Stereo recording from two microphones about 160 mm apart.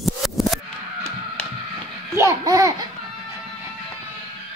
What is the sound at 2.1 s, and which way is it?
Babbling, 20° right (ahead or behind).